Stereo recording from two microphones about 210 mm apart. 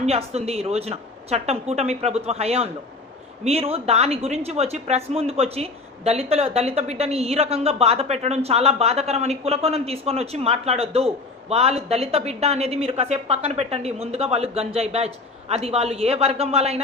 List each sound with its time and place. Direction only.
0.0 s a woman's voice: 30° right (ahead or behind)